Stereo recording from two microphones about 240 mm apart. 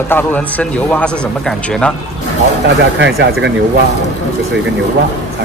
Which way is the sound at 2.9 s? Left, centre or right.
Right.